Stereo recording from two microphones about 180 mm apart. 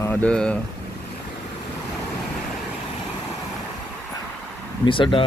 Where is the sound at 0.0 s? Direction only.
10° left (ahead or behind).